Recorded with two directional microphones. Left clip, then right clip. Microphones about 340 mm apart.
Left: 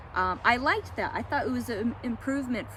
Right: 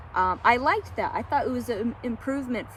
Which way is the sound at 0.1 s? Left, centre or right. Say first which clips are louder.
Right 4 dB; centre.